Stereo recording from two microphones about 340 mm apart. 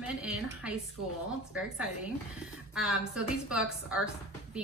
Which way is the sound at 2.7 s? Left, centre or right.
Centre.